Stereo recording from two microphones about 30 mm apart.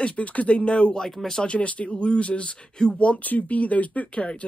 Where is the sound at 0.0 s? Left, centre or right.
Left.